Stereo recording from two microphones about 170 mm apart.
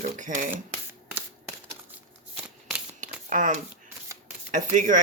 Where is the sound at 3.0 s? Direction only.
50° right (ahead or behind).